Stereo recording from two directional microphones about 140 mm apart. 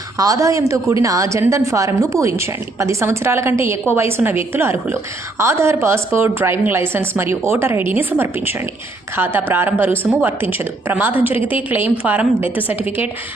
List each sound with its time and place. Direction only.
0.2 s a woman's voice: 25° right (ahead or behind)